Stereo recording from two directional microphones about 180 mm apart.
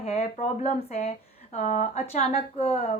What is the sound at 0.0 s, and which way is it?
Speech, 35° left (ahead or behind).